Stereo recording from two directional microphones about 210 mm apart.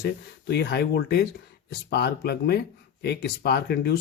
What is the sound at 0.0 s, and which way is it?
Speech, 50° left (ahead or behind).